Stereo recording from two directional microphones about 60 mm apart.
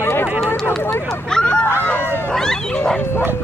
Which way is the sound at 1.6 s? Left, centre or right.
Left.